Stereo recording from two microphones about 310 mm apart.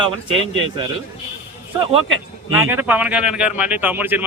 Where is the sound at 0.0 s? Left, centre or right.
Centre.